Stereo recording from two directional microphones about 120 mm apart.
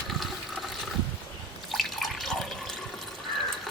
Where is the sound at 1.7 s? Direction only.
Centre (ahead or behind).